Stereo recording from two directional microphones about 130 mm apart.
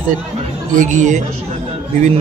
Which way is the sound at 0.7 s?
80° right.